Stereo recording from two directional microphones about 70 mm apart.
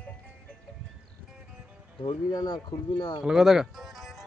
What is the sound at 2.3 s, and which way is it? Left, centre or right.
Speech, left.